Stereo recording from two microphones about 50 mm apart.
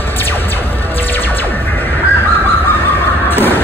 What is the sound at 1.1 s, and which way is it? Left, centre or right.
Music, left.